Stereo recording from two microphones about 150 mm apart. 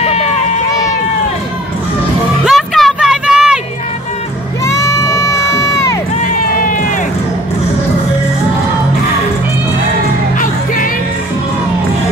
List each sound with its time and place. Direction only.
0.0 s run: 45° left (ahead or behind)
2.4 s a sound: centre (ahead or behind)
4.6 s crowd: 20° left (ahead or behind)